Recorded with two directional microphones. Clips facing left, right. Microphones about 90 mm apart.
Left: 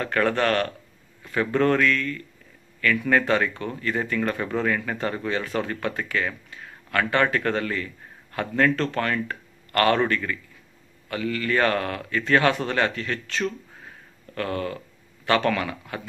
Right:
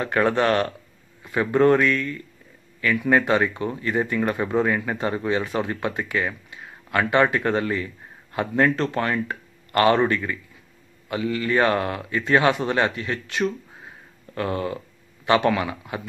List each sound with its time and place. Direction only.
0.0 s a man's voice: 15° right (ahead or behind)